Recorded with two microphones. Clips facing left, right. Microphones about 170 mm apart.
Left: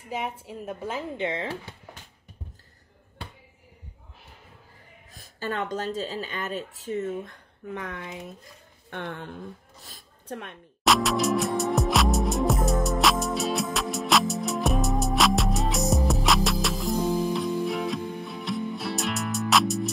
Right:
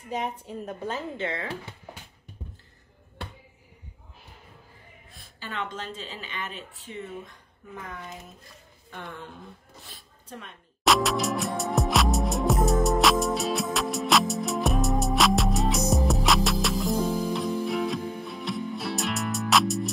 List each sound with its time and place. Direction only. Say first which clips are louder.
0.1 s speech: right 1 dB; 5° left (ahead or behind)
5.4 s speech: left 6 dB; 45° left (ahead or behind)
7.7 s speech: left 4 dB; 75° left (ahead or behind)
8.9 s a woman's voice: left 5 dB; 65° left (ahead or behind)
10.8 s music: left 1 dB; centre (ahead or behind)